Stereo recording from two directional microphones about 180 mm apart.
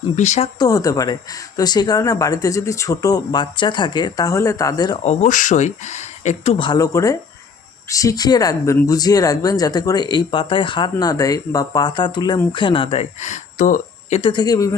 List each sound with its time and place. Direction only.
0.2 s speech: 35° left (ahead or behind)
0.6 s speech: 20° left (ahead or behind)
5.0 s speech: 45° left (ahead or behind)
14.2 s speech: 25° left (ahead or behind)